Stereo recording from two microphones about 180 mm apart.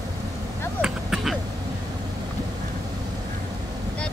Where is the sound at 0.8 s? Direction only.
5° right (ahead or behind).